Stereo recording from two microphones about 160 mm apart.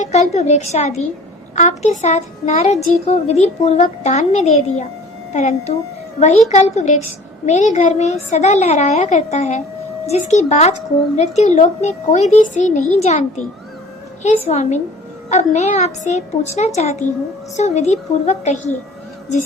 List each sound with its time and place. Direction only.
0.0 s speech: 45° left (ahead or behind)